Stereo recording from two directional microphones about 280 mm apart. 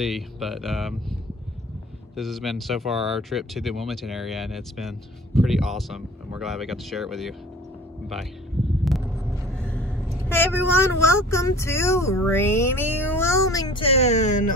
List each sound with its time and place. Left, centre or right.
0.0 s speech: centre
2.1 s speech: centre
8.8 s vehicle: centre
9.5 s rumble: centre
10.2 s speech: centre; by 14.4 s left